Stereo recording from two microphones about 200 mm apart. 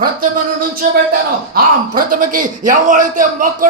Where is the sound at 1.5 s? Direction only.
45° right (ahead or behind).